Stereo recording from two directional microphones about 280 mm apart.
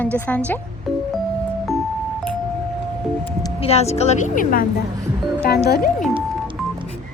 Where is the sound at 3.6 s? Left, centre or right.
Left.